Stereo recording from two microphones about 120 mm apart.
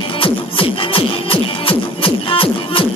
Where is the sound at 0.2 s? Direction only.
45° left (ahead or behind).